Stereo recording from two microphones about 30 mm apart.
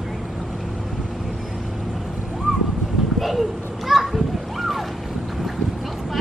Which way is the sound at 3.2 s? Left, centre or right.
Centre.